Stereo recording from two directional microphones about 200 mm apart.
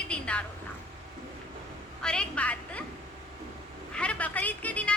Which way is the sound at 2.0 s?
5° left (ahead or behind).